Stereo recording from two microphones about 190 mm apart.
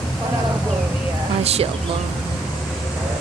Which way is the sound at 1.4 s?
35° right (ahead or behind).